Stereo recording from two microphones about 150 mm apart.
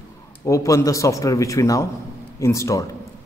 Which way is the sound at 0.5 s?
20° left (ahead or behind).